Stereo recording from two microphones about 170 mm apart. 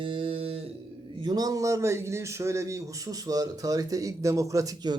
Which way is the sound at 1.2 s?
20° right (ahead or behind).